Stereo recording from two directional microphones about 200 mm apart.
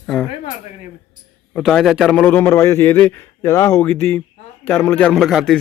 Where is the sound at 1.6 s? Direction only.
Centre (ahead or behind).